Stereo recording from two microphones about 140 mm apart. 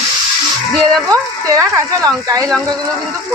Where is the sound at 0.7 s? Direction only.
5° left (ahead or behind).